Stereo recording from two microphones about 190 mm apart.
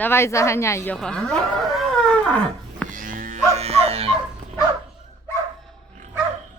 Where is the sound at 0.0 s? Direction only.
15° left (ahead or behind).